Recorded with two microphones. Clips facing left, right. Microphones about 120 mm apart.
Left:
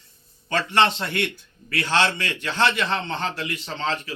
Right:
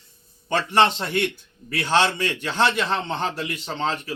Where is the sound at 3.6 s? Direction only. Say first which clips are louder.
Right 2 dB; 25° right (ahead or behind).